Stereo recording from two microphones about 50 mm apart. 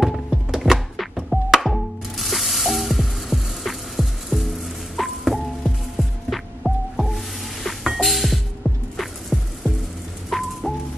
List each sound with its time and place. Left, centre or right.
0.0 s music: centre